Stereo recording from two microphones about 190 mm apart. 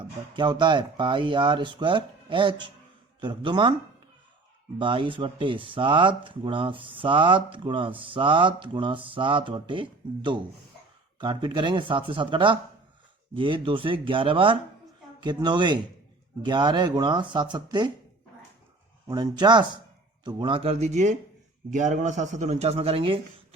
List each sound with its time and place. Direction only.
0.0 s speech: 25° right (ahead or behind)
4.8 s speech: 25° right (ahead or behind)
19.1 s speech: 20° right (ahead or behind)